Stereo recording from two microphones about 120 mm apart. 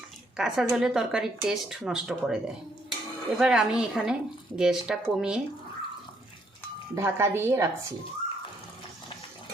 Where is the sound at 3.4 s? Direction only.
5° right (ahead or behind).